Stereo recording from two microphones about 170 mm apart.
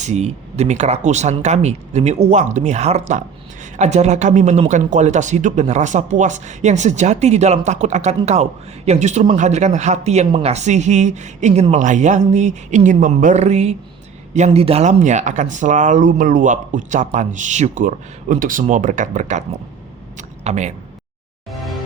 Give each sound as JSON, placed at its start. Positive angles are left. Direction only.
{"t": 0.0, "sound": "speech", "side_deg": -40}
{"t": 21.5, "sound": "music", "side_deg": 0}